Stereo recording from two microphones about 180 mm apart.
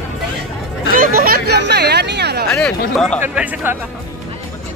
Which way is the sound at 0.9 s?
55° right (ahead or behind).